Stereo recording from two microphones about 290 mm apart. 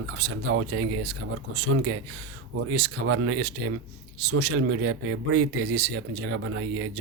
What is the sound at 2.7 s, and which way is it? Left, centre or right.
Speech, right.